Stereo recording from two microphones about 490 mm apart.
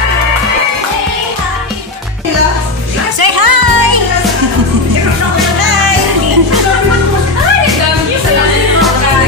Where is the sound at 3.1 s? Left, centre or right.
Right.